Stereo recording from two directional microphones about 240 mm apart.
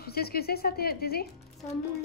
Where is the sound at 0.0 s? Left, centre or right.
Left.